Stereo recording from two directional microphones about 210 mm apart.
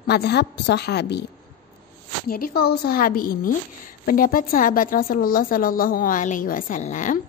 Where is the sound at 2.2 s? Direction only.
45° left (ahead or behind).